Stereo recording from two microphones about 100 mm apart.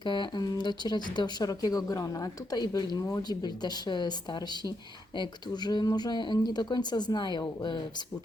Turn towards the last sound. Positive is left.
turn(degrees=50)  # may be behind; listen again after turning